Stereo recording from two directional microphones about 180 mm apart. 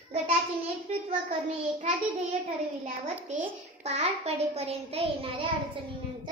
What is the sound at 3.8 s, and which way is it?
A child's voice, 35° right (ahead or behind).